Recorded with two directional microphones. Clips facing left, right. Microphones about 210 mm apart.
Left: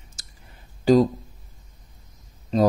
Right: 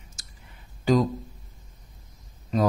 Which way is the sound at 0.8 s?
35° left (ahead or behind).